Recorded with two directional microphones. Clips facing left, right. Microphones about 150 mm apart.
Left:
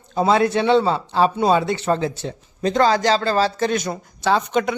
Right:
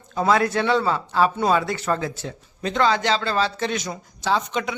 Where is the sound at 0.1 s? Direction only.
30° left (ahead or behind).